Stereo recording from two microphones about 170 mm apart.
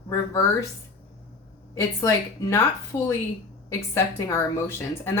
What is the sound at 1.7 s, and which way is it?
Speech, 20° left (ahead or behind).